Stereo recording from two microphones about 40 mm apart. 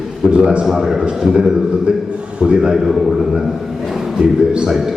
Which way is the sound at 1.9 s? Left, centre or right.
Right.